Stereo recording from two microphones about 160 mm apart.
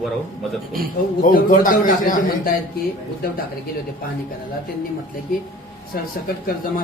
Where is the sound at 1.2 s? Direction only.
60° left (ahead or behind).